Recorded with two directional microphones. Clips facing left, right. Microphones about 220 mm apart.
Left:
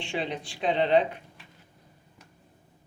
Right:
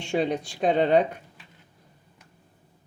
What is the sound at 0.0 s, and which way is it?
Speech, 45° right (ahead or behind).